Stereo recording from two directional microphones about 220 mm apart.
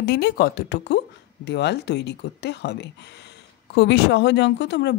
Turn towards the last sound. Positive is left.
turn(degrees=50)  # may be behind; listen again after turning